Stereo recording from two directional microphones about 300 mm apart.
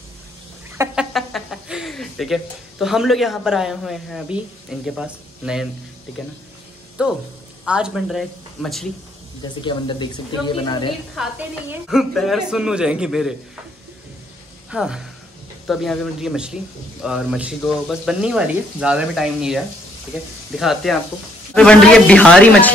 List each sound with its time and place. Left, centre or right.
0.7 s speech: centre
7.0 s speech: centre
9.6 s speech: centre
11.1 s speech: centre
14.7 s speech: centre